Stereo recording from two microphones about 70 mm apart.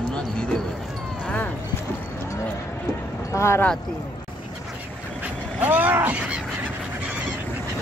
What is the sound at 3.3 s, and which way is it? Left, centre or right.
Speech, left.